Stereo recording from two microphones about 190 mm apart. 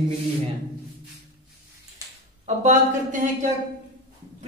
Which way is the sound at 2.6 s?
40° right (ahead or behind).